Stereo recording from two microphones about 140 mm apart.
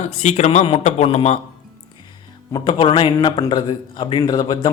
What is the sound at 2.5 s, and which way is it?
A man's voice, 35° left (ahead or behind).